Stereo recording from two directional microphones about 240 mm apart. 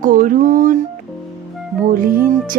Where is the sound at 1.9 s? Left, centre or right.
Right.